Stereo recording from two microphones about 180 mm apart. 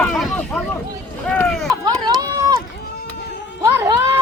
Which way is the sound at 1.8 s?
20° right (ahead or behind).